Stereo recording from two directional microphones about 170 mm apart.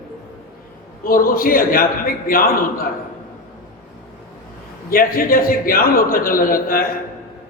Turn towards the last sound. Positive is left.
turn(degrees=55)  # may be behind; listen again after turning